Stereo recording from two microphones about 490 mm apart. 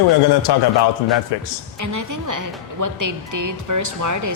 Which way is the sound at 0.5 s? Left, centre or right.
Left.